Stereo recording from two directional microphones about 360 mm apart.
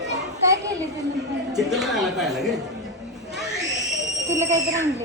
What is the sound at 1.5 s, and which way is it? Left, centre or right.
Speech, centre.